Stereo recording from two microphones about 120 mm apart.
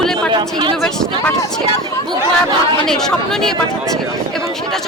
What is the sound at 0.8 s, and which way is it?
Speech, 5° left (ahead or behind).